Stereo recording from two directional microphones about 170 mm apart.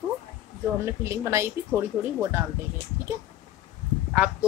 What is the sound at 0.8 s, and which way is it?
Speech, 15° right (ahead or behind).